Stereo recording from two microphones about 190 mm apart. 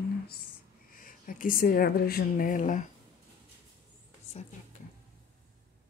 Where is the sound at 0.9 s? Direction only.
45° left (ahead or behind).